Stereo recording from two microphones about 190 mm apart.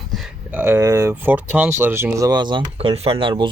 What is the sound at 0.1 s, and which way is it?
Speech, 10° right (ahead or behind).